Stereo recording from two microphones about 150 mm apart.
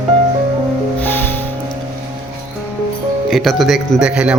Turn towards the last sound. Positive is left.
turn(degrees=-5)  # may be behind; listen again after turning